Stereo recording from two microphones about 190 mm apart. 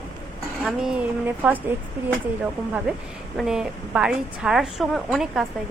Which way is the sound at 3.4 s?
5° right (ahead or behind).